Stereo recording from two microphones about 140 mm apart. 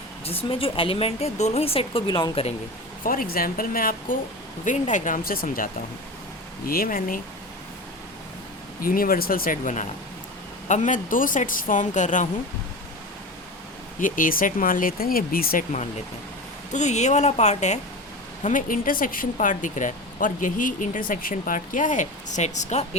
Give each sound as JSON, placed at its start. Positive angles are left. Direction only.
{"t": 0.3, "sound": "speech", "side_deg": 40}
{"t": 2.0, "sound": "speech", "side_deg": 30}
{"t": 3.0, "sound": "speech", "side_deg": 85}
{"t": 4.6, "sound": "speech", "side_deg": 60}
{"t": 8.8, "sound": "speech", "side_deg": 90}
{"t": 14.0, "sound": "speech", "side_deg": 80}
{"t": 16.7, "sound": "speech", "side_deg": 55}
{"t": 18.4, "sound": "speech", "side_deg": 75}